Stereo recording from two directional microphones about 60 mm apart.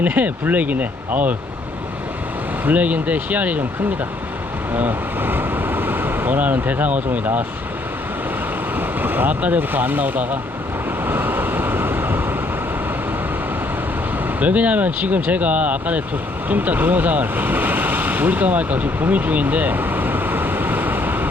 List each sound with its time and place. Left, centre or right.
0.0 s speech: right
2.6 s speech: right
4.7 s speech: right
8.7 s speech: right
11.0 s vehicle: right
14.3 s speech: right